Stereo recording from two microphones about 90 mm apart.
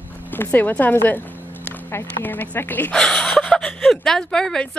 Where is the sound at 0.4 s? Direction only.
20° left (ahead or behind).